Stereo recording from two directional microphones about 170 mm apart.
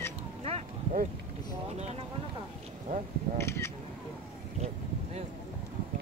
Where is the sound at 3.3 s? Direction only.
15° left (ahead or behind).